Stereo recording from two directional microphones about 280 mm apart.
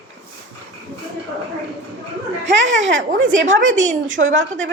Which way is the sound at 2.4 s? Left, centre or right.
Right.